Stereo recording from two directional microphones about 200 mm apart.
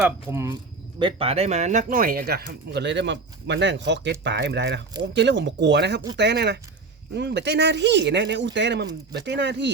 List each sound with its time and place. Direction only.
0.0 s speech: 15° right (ahead or behind)
0.9 s speech: 25° right (ahead or behind); by 9.7 s 60° right (ahead or behind)